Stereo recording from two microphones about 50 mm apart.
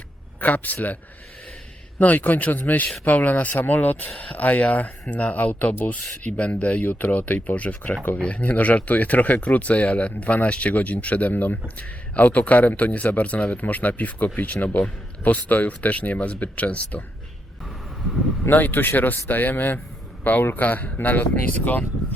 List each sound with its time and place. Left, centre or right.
0.3 s speech: left
2.0 s speech: left
18.4 s speech: left